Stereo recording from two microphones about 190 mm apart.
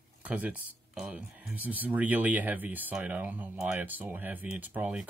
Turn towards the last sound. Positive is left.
turn(degrees=-10)  # may be behind; listen again after turning